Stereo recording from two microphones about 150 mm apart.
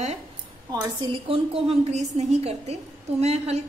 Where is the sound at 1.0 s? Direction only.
35° right (ahead or behind).